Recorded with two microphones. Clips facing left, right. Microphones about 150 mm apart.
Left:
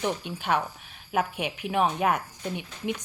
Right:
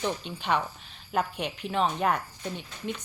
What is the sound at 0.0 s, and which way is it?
Speech, 15° left (ahead or behind).